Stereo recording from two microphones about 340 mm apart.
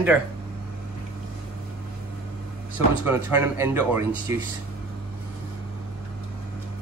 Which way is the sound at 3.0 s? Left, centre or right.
Centre.